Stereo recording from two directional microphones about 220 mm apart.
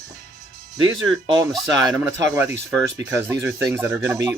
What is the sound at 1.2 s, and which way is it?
Speech, 20° right (ahead or behind).